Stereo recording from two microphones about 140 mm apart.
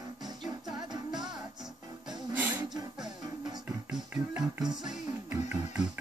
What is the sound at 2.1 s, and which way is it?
Music, 10° right (ahead or behind).